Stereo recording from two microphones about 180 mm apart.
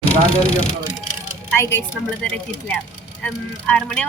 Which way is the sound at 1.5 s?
15° left (ahead or behind).